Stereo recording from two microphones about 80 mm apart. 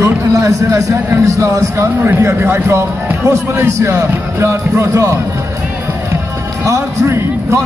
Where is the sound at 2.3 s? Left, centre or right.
Right.